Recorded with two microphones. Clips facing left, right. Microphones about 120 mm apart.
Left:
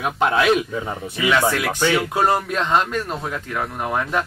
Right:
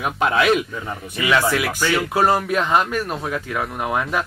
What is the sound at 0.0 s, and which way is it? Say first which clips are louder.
Speech: even; centre (ahead or behind).